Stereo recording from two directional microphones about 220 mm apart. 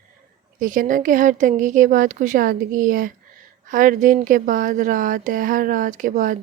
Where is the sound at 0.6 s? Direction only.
35° right (ahead or behind).